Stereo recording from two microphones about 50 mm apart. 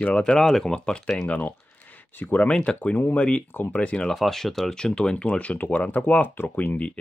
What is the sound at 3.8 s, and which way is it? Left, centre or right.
Speech, left.